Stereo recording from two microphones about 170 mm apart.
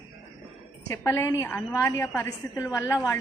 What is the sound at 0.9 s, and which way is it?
A woman's voice, 15° left (ahead or behind).